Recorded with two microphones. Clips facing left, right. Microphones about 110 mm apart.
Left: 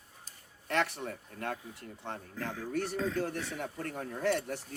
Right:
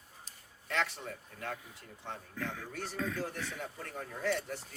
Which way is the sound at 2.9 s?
30° left (ahead or behind).